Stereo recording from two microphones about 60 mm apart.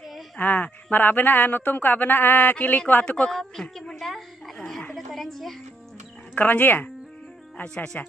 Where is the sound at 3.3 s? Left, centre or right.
Centre.